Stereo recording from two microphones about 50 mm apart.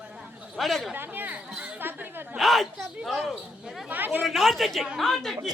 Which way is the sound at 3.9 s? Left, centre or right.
Right.